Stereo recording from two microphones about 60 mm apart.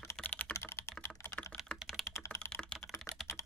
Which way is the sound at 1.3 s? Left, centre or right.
Centre.